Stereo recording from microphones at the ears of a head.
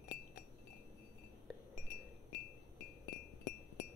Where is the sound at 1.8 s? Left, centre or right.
Left.